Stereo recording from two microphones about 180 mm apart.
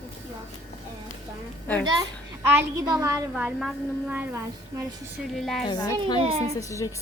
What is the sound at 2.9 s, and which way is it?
Speech, 20° right (ahead or behind).